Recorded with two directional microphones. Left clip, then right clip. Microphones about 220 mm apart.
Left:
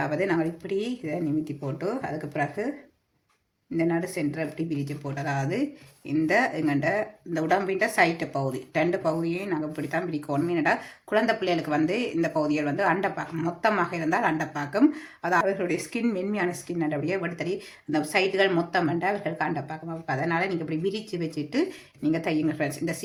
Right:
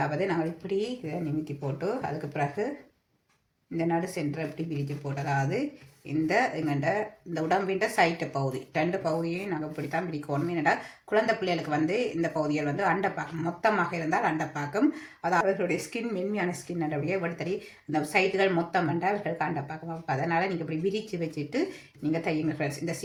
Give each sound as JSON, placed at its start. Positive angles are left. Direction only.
{"t": 0.3, "sound": "speech", "side_deg": 30}
{"t": 3.8, "sound": "speech", "side_deg": 25}